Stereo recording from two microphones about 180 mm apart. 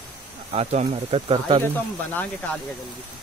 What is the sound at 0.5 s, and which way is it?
Speech, 35° right (ahead or behind).